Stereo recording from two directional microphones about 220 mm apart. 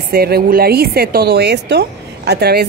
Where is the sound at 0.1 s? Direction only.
45° right (ahead or behind).